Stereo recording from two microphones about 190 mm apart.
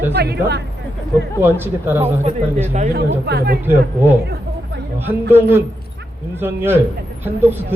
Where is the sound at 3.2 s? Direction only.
55° right (ahead or behind).